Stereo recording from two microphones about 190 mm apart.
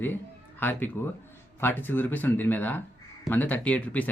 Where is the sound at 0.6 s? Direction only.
10° left (ahead or behind).